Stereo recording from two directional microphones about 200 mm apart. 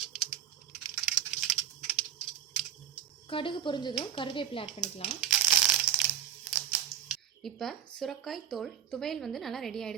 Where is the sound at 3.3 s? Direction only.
25° left (ahead or behind).